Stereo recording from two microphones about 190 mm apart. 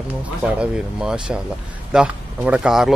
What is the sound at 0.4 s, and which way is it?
Speech, 5° right (ahead or behind).